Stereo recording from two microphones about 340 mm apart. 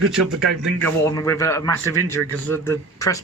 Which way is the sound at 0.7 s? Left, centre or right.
Centre.